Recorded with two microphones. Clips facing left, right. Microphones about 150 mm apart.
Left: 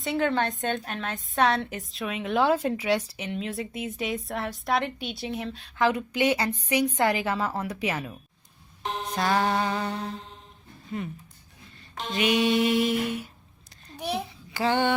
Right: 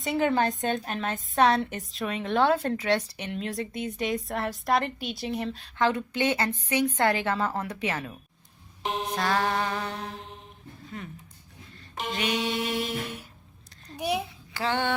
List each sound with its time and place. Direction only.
0.0 s a woman's voice: 5° right (ahead or behind); by 8.1 s 10° left (ahead or behind)
8.8 s music: 15° right (ahead or behind)
9.1 s a woman's voice: 10° left (ahead or behind)
12.1 s a woman's voice: 5° left (ahead or behind)
13.9 s a child's voice: 10° right (ahead or behind)
14.5 s a sound: 10° left (ahead or behind)